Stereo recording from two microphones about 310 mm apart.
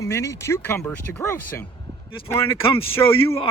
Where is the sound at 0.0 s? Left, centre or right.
Centre.